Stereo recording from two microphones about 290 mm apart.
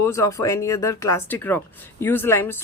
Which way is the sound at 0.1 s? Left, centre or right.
Centre.